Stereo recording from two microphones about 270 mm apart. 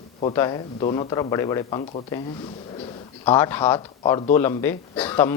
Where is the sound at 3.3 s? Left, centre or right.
Centre.